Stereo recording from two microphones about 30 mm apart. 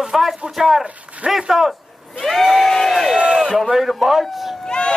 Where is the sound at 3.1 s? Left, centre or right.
Right.